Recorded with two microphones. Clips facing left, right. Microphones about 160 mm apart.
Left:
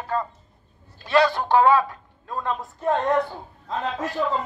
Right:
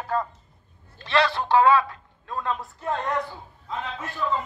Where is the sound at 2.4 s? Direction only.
35° left (ahead or behind).